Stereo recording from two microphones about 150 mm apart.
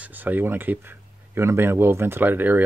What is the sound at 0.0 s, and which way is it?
Speech, 10° right (ahead or behind).